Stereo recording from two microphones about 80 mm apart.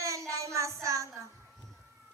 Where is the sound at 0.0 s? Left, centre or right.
Right.